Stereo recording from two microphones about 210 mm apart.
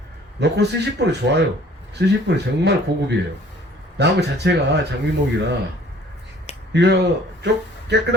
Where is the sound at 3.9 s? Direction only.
55° right (ahead or behind).